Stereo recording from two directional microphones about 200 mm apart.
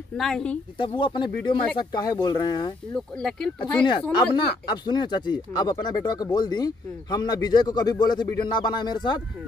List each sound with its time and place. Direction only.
0.2 s speech: 5° left (ahead or behind)
0.7 s speech: 25° left (ahead or behind)
3.2 s speech: 5° left (ahead or behind)
4.6 s speech: 20° left (ahead or behind)